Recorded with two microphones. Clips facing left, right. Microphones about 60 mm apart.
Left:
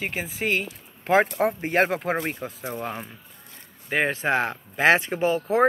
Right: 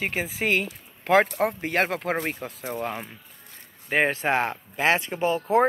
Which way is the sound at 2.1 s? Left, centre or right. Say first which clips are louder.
Left 1 dB; centre.